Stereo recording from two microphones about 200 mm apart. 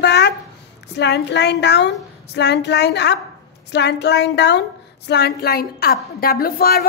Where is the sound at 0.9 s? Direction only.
60° left (ahead or behind).